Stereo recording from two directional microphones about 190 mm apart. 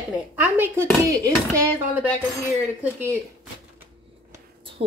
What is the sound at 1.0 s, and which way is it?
Speech, 15° right (ahead or behind).